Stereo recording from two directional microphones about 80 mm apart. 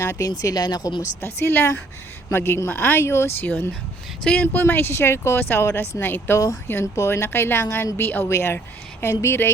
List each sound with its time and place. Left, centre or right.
0.0 s speech: left
0.3 s speech: left
1.2 s speech: left
4.2 s speech: centre
4.5 s speech: left